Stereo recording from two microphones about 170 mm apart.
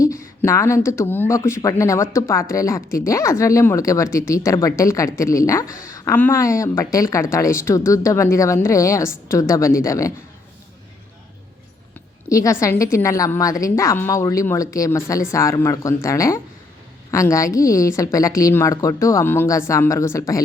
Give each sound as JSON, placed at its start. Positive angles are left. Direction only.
{"t": 0.4, "sound": "speech", "side_deg": 15}
{"t": 5.6, "sound": "a woman's voice", "side_deg": 55}
{"t": 6.1, "sound": "speech", "side_deg": 15}
{"t": 12.3, "sound": "a woman's voice", "side_deg": 20}